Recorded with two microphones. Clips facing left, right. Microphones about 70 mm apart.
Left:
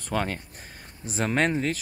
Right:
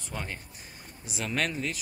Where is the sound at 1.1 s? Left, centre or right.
Left.